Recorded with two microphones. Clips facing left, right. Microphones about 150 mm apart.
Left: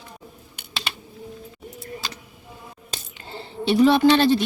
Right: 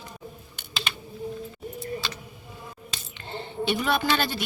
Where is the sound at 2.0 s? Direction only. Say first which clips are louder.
Even; 40° left (ahead or behind).